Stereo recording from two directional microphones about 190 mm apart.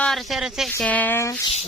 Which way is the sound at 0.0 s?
Centre (ahead or behind).